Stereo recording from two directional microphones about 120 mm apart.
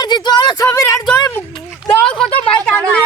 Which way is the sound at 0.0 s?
35° left (ahead or behind).